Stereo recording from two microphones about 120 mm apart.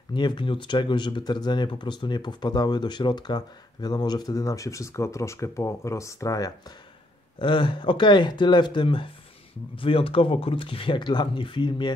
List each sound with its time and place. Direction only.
0.1 s speech: 40° left (ahead or behind)
7.3 s speech: 40° left (ahead or behind)